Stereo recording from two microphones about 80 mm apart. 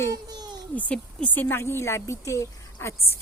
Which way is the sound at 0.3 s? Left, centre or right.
Right.